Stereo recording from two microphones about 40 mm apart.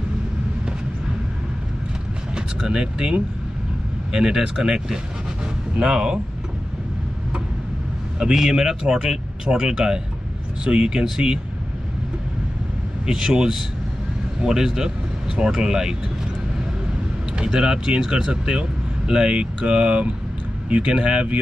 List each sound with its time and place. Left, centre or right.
2.3 s speech: right
5.4 s a sound: centre
8.2 s speech: centre
13.0 s speech: centre
17.4 s speech: right